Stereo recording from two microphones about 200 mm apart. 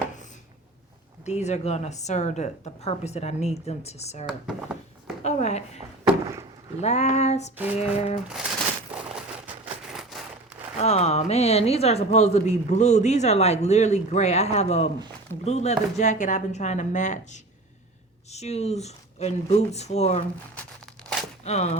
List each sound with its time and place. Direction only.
1.2 s speech: 35° left (ahead or behind)
4.3 s speech: 5° right (ahead or behind)
5.2 s speech: 35° left (ahead or behind)
6.8 s speech: 35° left (ahead or behind)
8.3 s a sound: 5° right (ahead or behind)
10.8 s speech: 35° left (ahead or behind)
20.8 s a sound: centre (ahead or behind)
21.4 s speech: 35° left (ahead or behind)